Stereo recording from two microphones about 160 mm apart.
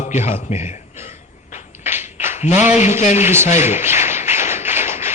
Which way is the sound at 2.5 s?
15° right (ahead or behind).